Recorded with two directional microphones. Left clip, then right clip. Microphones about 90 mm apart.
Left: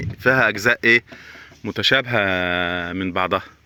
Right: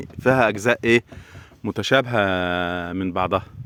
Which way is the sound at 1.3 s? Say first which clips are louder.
Even; 55° right (ahead or behind).